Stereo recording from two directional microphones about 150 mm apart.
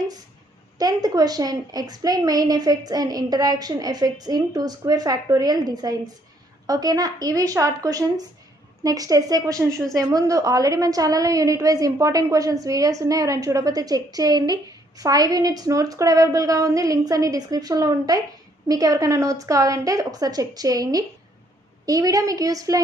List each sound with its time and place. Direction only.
0.7 s a woman's voice: 25° right (ahead or behind)